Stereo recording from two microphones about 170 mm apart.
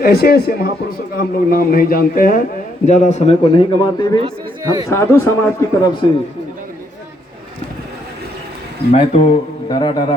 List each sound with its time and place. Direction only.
0.0 s a man's voice: 60° left (ahead or behind)
2.8 s a man's voice: 45° left (ahead or behind); by 6.1 s 20° left (ahead or behind)
8.9 s a man's voice: 40° left (ahead or behind)
9.6 s a man's voice: 25° left (ahead or behind)